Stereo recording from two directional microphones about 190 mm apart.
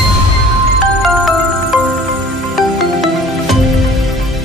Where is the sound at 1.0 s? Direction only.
Centre (ahead or behind).